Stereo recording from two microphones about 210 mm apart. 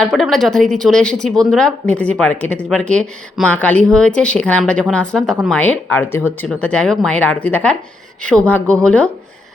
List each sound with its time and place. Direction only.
0.0 s speech: centre (ahead or behind)